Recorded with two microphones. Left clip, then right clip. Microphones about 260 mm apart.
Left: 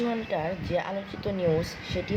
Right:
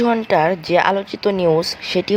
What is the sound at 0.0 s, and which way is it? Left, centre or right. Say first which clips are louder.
Speech: right 14 dB; right.